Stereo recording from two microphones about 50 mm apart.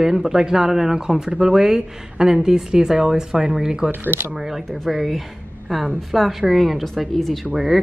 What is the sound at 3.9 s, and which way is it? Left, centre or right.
Speech, right.